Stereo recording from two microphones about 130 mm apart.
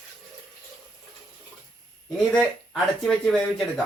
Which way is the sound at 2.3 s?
Centre (ahead or behind).